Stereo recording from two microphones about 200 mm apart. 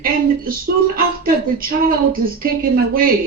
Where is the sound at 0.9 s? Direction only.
45° right (ahead or behind).